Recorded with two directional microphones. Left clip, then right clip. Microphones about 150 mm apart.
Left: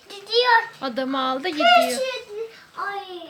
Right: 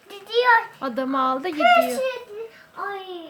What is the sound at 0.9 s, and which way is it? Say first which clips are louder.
Speech: right 2 dB; 15° right (ahead or behind).